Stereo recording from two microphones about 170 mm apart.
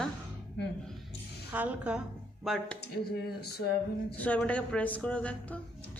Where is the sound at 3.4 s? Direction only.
70° left (ahead or behind).